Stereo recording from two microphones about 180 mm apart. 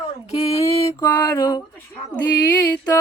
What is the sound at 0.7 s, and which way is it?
Mantra, 15° left (ahead or behind).